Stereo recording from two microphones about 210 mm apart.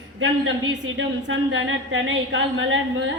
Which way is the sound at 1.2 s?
65° right (ahead or behind).